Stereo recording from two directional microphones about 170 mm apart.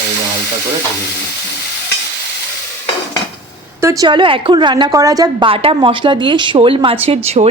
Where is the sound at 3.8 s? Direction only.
20° right (ahead or behind).